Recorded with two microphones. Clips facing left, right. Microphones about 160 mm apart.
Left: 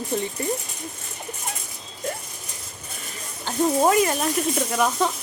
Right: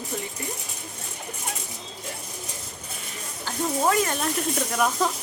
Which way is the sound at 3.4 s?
20° left (ahead or behind).